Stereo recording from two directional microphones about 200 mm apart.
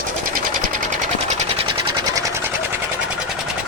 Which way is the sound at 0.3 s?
40° right (ahead or behind).